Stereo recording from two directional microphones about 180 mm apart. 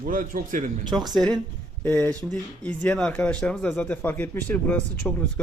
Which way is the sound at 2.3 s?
5° left (ahead or behind).